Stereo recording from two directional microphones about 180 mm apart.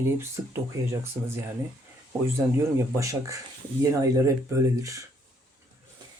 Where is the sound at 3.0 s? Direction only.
20° right (ahead or behind).